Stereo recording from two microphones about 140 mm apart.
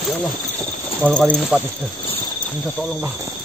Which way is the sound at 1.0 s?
5° left (ahead or behind).